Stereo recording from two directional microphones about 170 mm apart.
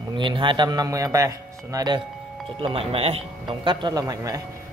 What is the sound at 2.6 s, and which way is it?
A man's voice, 35° right (ahead or behind).